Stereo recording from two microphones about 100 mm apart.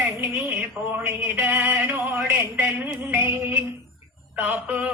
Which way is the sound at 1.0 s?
20° right (ahead or behind).